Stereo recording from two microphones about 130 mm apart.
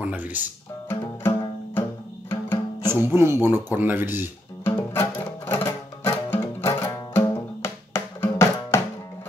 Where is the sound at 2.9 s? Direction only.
20° right (ahead or behind).